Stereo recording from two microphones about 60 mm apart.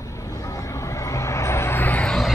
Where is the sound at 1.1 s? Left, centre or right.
Left.